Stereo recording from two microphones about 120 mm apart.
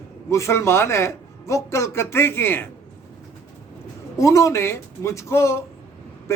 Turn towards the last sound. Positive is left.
turn(degrees=25)  # may be behind; listen again after turning